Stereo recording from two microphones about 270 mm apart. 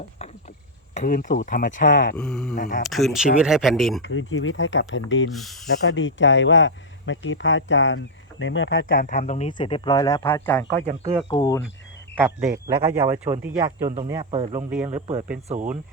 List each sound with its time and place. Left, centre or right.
0.9 s speech: left
2.1 s speech: centre
2.6 s speech: left
2.9 s speech: centre
4.0 s speech: left
5.3 s speech: centre
5.9 s speech: left; by 10.7 s centre
10.8 s speech: right
11.3 s speech: centre
12.1 s a man's voice: centre
13.8 s a man's voice: right